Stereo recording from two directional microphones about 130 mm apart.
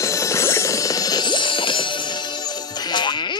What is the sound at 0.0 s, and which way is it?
Music, 25° left (ahead or behind).